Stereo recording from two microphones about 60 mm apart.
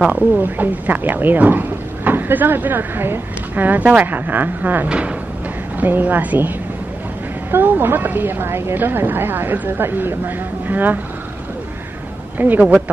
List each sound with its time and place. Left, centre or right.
0.4 s speech: right
4.8 s speech: centre
5.8 s speech: right
7.5 s speech: right
12.4 s speech: right